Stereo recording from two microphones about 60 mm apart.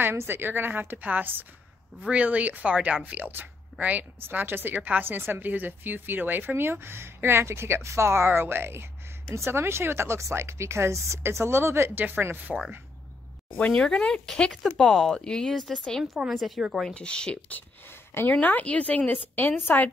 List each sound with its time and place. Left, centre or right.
0.0 s speech: right
13.7 s speech: centre
16.3 s speech: centre
16.9 s speech: centre
18.3 s speech: left